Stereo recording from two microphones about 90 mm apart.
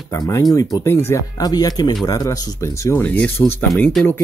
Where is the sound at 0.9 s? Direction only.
30° left (ahead or behind).